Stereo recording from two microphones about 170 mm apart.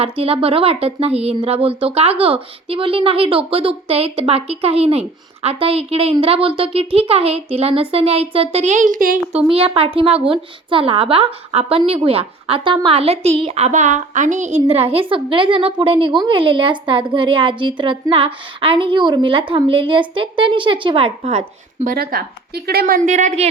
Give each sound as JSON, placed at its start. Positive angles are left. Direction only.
{"t": 0.0, "sound": "speech", "side_deg": -35}
{"t": 9.5, "sound": "speech", "side_deg": -35}
{"t": 21.9, "sound": "speech", "side_deg": -65}
{"t": 23.0, "sound": "a woman's voice", "side_deg": -45}